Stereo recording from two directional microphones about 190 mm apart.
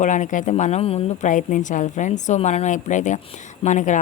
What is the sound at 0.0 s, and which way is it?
Speech, 40° left (ahead or behind).